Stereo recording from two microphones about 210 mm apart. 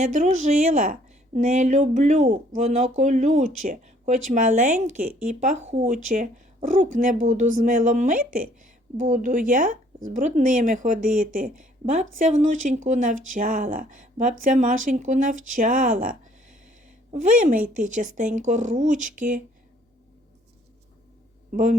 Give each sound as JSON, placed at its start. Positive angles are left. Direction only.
{"t": 0.0, "sound": "speech", "side_deg": -35}
{"t": 21.5, "sound": "speech", "side_deg": -40}